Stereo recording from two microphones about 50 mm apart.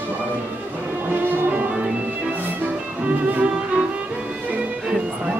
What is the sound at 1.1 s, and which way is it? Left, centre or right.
Music, right.